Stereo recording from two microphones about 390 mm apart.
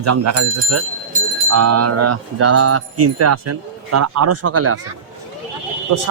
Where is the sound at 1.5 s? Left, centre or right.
Right.